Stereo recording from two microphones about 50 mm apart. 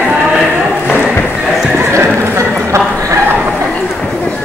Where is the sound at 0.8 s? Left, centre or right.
Left.